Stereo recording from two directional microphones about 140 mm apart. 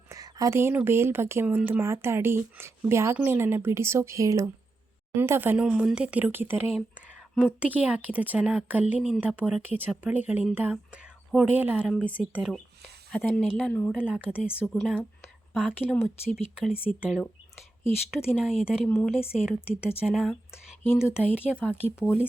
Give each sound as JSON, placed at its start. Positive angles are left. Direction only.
{"t": 0.1, "sound": "a woman's voice", "side_deg": -25}
{"t": 9.6, "sound": "a woman's voice", "side_deg": -15}
{"t": 21.5, "sound": "speech", "side_deg": 10}
{"t": 21.8, "sound": "a woman's voice", "side_deg": -10}